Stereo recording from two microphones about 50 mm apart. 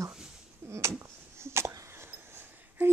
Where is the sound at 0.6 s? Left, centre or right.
Right.